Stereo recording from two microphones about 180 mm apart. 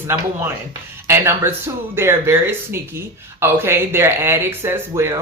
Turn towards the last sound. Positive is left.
turn(degrees=-15)  # may be behind; listen again after turning